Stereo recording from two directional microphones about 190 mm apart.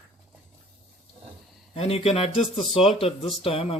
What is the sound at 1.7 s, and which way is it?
Speech, 30° left (ahead or behind).